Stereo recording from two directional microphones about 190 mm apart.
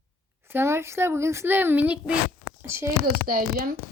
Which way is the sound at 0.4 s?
10° right (ahead or behind).